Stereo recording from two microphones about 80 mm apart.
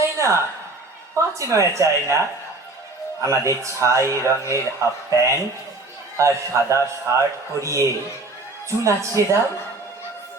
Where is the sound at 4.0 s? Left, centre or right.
Left.